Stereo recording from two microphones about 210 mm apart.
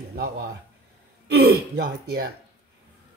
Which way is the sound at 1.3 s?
50° right (ahead or behind).